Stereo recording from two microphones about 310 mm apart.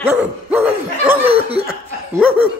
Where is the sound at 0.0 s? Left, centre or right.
Centre.